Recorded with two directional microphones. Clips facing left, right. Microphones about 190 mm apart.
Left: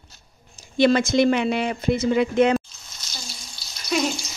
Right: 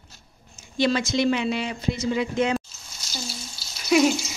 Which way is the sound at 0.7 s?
55° left (ahead or behind).